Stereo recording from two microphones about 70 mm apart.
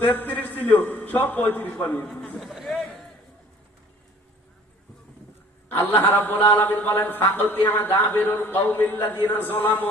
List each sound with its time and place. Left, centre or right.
0.0 s a man's voice: left
2.0 s a man's voice: centre
2.4 s a sound: centre
5.6 s a man's voice: left